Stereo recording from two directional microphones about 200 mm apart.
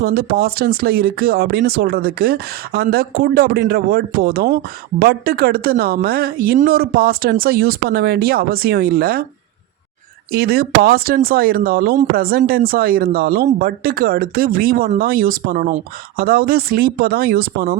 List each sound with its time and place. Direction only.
0.0 s speech: 50° right (ahead or behind)
10.3 s speech: 50° right (ahead or behind)